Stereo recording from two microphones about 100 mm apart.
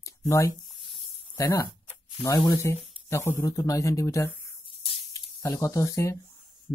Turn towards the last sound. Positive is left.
turn(degrees=30)  # may be behind; listen again after turning